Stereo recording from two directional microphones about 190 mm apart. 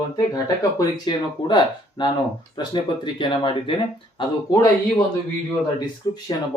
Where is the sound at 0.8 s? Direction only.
25° left (ahead or behind).